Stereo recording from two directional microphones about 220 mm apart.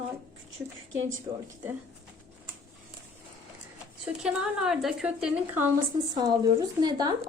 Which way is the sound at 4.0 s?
5° right (ahead or behind).